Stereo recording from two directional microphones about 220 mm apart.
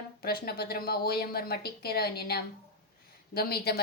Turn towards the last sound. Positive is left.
turn(degrees=45)  # may be behind; listen again after turning